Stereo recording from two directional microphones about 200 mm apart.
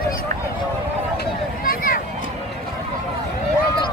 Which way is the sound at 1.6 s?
45° left (ahead or behind).